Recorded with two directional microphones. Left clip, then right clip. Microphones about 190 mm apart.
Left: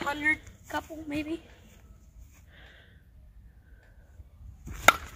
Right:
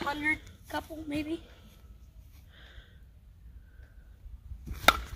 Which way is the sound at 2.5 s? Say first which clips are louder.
Left 1 dB; 5° right (ahead or behind).